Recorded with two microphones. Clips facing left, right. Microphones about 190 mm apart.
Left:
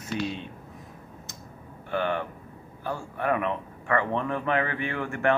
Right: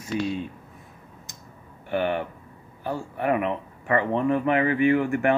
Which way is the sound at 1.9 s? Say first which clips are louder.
Right 3 dB; 15° right (ahead or behind).